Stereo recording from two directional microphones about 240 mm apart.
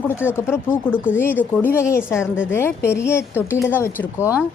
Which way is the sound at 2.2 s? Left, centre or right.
Centre.